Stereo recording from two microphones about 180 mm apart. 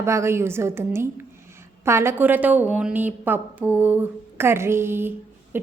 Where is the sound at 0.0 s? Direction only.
15° right (ahead or behind).